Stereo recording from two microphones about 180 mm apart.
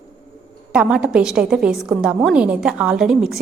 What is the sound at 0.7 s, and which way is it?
A woman's voice, 5° right (ahead or behind).